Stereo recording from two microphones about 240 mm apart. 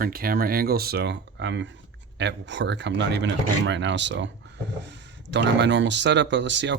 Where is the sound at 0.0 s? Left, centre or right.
Right.